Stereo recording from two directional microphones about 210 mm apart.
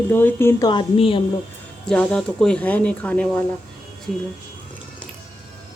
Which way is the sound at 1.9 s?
5° left (ahead or behind).